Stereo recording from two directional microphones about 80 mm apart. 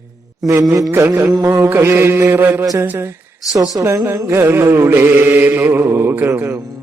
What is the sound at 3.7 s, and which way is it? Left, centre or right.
Speech, right.